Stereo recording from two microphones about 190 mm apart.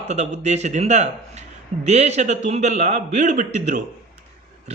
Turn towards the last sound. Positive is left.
turn(degrees=-40)  # may be behind; listen again after turning